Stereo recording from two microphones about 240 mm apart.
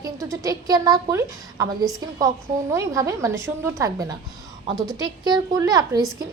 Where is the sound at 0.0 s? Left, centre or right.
Centre.